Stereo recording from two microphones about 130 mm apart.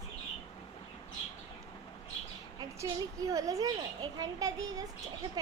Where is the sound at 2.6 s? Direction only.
25° right (ahead or behind).